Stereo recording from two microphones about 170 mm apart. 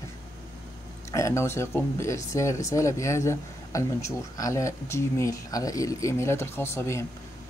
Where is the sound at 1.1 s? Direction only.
15° left (ahead or behind).